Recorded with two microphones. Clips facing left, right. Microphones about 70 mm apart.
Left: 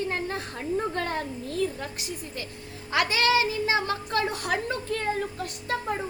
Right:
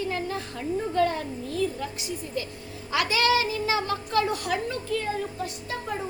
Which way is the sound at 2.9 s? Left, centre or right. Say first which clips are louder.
Even; left.